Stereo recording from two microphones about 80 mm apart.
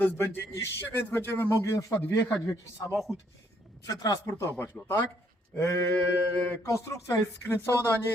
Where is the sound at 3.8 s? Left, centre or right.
Left.